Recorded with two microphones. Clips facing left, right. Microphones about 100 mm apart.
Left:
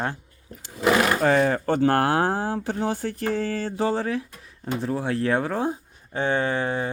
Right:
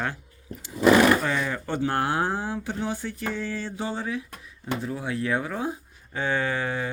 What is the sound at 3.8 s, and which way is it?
Speech, 85° left.